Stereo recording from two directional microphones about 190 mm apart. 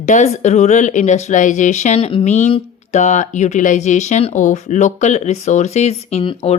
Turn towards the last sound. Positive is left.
turn(degrees=30)  # may be behind; listen again after turning